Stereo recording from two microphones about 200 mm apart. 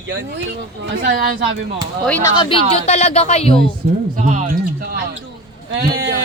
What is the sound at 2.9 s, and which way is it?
Speech, 35° left (ahead or behind).